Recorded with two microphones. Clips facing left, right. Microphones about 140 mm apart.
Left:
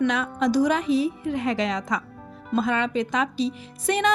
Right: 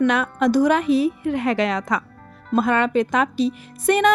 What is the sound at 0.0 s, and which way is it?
A woman's voice, 60° right (ahead or behind).